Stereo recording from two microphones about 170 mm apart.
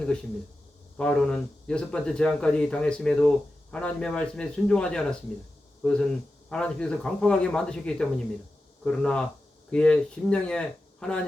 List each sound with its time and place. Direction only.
0.9 s speech: 5° left (ahead or behind)